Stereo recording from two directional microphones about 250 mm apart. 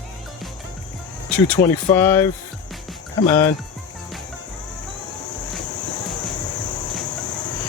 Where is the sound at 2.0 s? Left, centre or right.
Centre.